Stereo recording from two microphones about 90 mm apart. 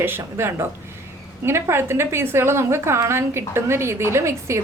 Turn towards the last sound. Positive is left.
turn(degrees=-30)  # may be behind; listen again after turning